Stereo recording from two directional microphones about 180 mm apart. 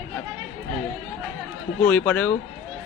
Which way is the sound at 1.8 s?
10° left (ahead or behind).